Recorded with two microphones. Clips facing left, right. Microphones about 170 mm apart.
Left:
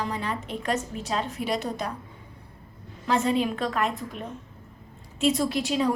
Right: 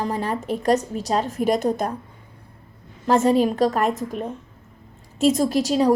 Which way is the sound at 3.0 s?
45° right (ahead or behind).